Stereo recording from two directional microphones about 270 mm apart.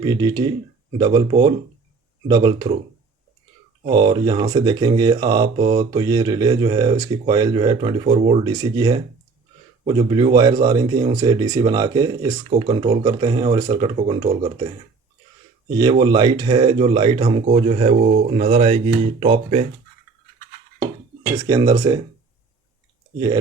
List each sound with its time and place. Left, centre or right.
0.0 s speech: centre
3.8 s speech: centre
15.8 s speech: centre
21.4 s speech: centre